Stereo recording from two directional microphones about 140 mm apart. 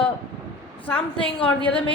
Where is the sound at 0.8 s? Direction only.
10° left (ahead or behind).